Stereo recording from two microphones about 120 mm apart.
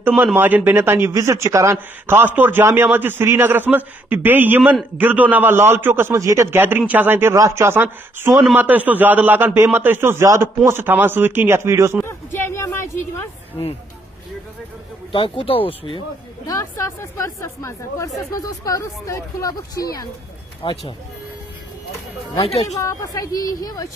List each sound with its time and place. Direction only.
0.0 s a man's voice: 15° right (ahead or behind)
12.0 s a sound: 20° left (ahead or behind)
15.1 s speech: 45° left (ahead or behind)
16.4 s speech: 25° left (ahead or behind)
20.6 s speech: 45° left (ahead or behind)
22.4 s speech: 55° left (ahead or behind)
22.8 s speech: 25° left (ahead or behind)